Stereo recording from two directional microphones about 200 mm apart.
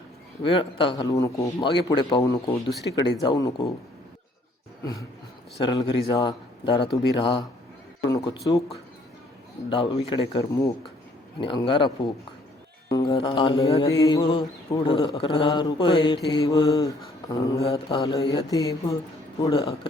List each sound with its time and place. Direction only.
0.4 s mantra: 25° left (ahead or behind)
5.6 s mantra: 20° left (ahead or behind)
12.9 s mantra: 20° left (ahead or behind)
17.3 s speech: 15° left (ahead or behind)
17.7 s mantra: 20° left (ahead or behind)
18.5 s speech: 15° left (ahead or behind)
19.5 s mantra: 25° left (ahead or behind)